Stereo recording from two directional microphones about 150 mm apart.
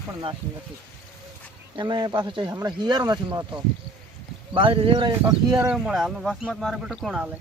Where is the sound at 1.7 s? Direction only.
30° right (ahead or behind).